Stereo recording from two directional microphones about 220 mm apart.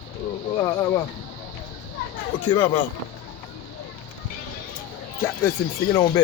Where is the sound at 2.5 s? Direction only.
20° left (ahead or behind).